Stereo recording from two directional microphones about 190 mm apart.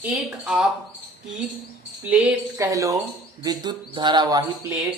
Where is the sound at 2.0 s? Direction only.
5° right (ahead or behind).